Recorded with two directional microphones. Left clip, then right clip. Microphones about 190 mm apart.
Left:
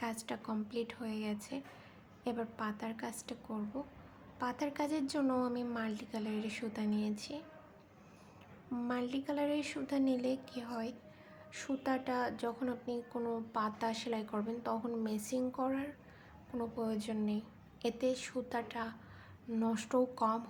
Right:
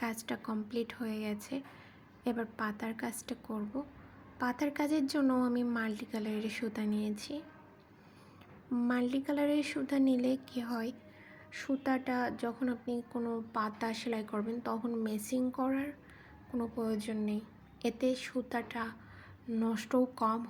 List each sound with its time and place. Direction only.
0.0 s a woman's voice: 10° right (ahead or behind)
8.7 s a woman's voice: 10° right (ahead or behind)